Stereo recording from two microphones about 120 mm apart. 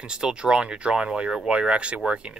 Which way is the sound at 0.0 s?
5° right (ahead or behind).